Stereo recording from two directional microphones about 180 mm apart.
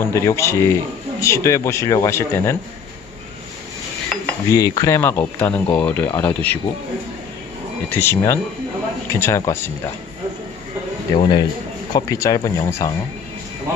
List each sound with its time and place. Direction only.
0.0 s speech: 15° left (ahead or behind)
4.5 s speech: 20° left (ahead or behind)
7.9 s speech: 15° left (ahead or behind)
11.1 s speech: 25° left (ahead or behind)